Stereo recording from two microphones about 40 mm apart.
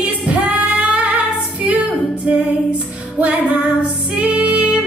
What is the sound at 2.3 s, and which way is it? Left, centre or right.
Female singing, right.